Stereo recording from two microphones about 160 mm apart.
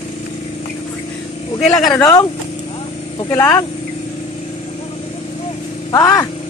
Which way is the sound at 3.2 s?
20° left (ahead or behind).